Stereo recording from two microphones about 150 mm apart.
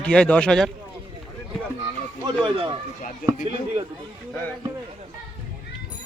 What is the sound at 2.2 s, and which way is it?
Speech, 30° right (ahead or behind).